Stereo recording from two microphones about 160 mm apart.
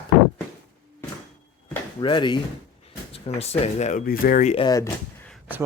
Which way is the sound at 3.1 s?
40° left (ahead or behind).